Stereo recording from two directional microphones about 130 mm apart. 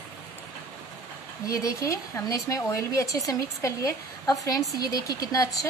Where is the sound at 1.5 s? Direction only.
25° left (ahead or behind).